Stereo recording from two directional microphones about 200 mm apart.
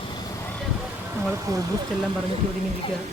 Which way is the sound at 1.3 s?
15° right (ahead or behind).